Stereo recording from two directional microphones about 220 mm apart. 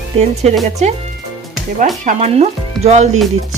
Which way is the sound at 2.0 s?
30° right (ahead or behind).